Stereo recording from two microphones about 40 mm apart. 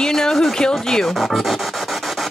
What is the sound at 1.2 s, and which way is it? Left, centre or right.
Speech, centre.